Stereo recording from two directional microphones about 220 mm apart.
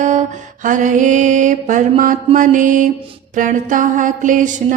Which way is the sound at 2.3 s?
35° right (ahead or behind).